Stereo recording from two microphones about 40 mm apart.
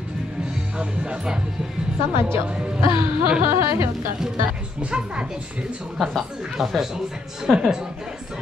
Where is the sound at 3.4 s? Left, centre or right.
Right.